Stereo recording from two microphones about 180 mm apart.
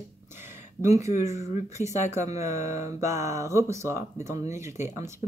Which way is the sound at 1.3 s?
40° left (ahead or behind).